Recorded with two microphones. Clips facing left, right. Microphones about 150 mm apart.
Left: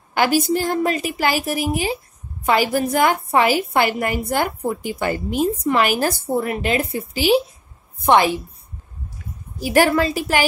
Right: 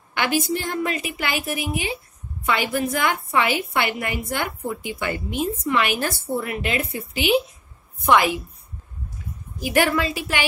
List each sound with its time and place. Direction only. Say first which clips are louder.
0.1 s a woman's voice: left 5 dB; 40° left (ahead or behind)
9.6 s a woman's voice: left 4 dB; 35° left (ahead or behind)